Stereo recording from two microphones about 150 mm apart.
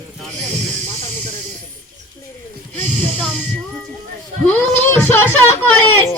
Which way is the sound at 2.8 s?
10° left (ahead or behind).